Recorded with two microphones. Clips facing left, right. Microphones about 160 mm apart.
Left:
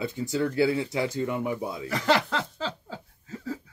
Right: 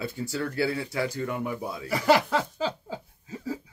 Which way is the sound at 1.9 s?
10° right (ahead or behind).